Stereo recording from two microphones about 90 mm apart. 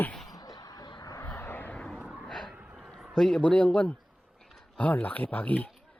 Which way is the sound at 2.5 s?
10° right (ahead or behind).